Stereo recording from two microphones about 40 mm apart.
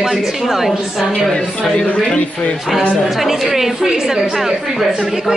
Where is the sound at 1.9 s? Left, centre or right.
Left.